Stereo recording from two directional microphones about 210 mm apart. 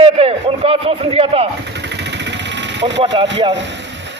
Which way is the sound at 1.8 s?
55° right (ahead or behind).